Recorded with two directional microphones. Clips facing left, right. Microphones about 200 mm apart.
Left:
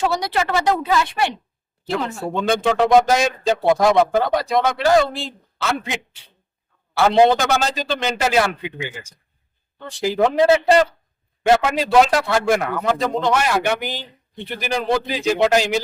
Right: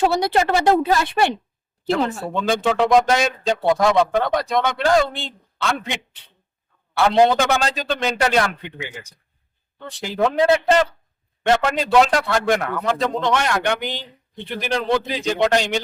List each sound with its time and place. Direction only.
0.2 s a woman's voice: 45° right (ahead or behind)
2.4 s speech: centre (ahead or behind)